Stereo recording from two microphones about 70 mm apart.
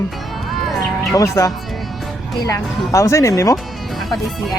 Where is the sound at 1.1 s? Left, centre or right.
Left.